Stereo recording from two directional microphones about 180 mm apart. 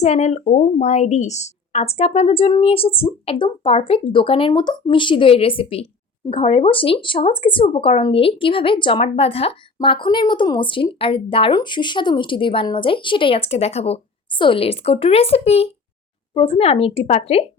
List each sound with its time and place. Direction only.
0.0 s a woman's voice: 40° left (ahead or behind)